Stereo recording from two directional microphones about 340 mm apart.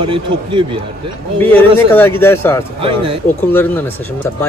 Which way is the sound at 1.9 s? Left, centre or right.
Centre.